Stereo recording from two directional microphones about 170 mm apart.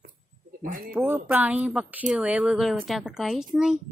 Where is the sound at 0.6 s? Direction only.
50° right (ahead or behind).